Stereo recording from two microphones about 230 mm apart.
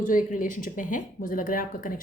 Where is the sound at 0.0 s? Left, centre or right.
Left.